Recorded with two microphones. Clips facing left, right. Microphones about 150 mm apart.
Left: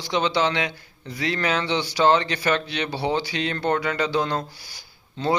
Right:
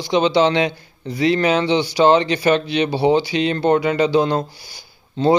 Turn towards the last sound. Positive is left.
turn(degrees=-20)  # may be behind; listen again after turning